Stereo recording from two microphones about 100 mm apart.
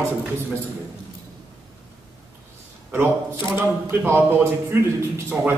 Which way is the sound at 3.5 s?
20° right (ahead or behind).